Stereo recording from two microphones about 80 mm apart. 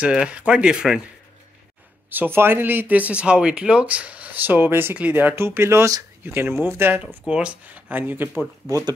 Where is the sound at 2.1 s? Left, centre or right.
Right.